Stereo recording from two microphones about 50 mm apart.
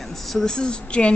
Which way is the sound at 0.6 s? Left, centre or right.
Left.